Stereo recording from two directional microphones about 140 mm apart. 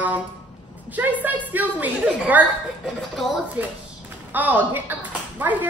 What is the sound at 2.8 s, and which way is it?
Speech, 5° left (ahead or behind).